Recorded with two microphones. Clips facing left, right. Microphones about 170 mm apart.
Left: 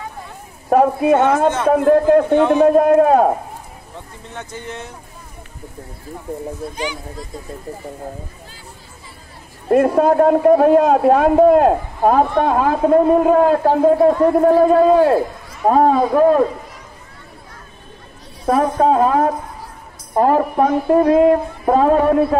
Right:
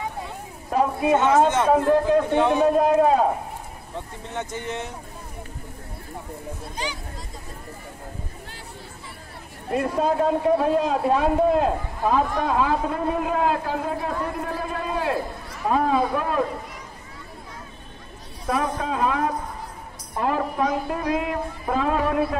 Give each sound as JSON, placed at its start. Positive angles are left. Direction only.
{"t": 0.7, "sound": "a man's voice", "side_deg": 60}
{"t": 4.4, "sound": "speech", "side_deg": -20}
{"t": 9.7, "sound": "a man's voice", "side_deg": 60}
{"t": 18.5, "sound": "a man's voice", "side_deg": 40}